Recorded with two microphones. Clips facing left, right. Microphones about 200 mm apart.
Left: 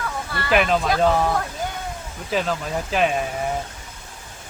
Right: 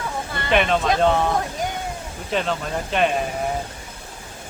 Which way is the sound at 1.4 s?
20° right (ahead or behind).